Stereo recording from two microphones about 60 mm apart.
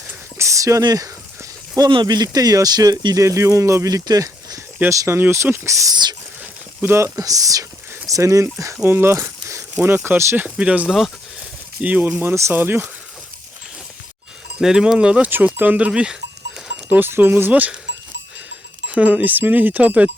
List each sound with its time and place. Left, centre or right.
0.3 s speech: right
4.9 s speech: right
6.8 s speech: right
7.2 s speech: right
8.7 s speech: right
10.3 s speech: right
10.8 s speech: centre
11.8 s speech: right
12.0 s speech: right
14.6 s speech: centre
15.5 s speech: right
15.9 s speech: centre
17.0 s speech: right
18.9 s speech: right